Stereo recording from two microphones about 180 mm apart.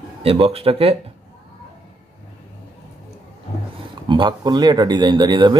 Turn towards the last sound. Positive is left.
turn(degrees=-25)  # may be behind; listen again after turning